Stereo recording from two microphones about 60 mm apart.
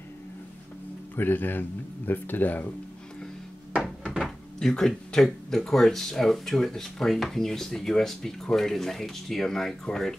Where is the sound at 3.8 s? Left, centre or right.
Centre.